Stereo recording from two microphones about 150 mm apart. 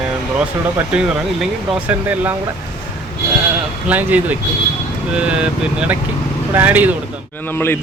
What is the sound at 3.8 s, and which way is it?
Speech, 10° right (ahead or behind).